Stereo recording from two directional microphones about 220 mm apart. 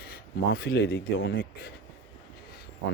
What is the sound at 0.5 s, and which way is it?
Speech, 45° left (ahead or behind).